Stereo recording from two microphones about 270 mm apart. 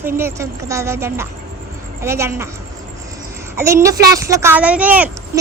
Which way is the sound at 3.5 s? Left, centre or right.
Centre.